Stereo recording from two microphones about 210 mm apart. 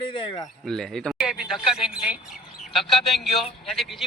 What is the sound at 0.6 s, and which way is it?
Speech, centre (ahead or behind).